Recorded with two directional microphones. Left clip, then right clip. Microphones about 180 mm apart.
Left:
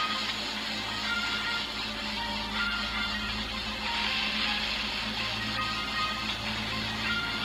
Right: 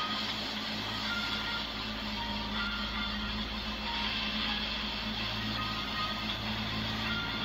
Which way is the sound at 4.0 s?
35° left (ahead or behind).